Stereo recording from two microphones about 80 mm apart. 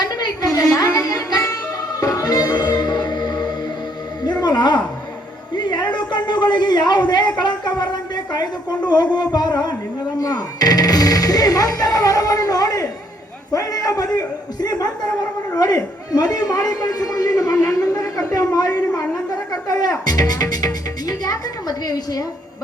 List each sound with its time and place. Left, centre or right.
0.0 s music: left
5.5 s a sound: left
10.2 s a man's voice: left